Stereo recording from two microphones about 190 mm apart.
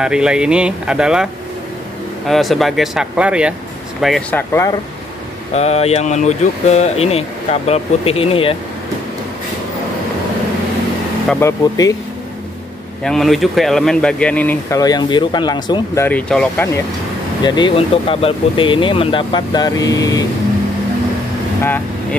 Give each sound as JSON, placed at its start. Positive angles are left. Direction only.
{"t": 0.0, "sound": "speech", "side_deg": -5}
{"t": 5.5, "sound": "speech", "side_deg": 35}
{"t": 11.2, "sound": "speech", "side_deg": 15}
{"t": 13.0, "sound": "speech", "side_deg": 0}
{"t": 14.8, "sound": "speech", "side_deg": 20}
{"t": 17.4, "sound": "speech", "side_deg": 25}